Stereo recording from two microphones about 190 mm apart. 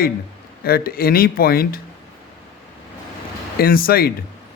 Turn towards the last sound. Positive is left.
turn(degrees=50)  # may be behind; listen again after turning